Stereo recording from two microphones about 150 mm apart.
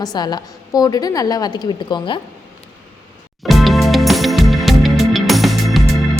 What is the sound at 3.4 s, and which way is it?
Music, centre (ahead or behind).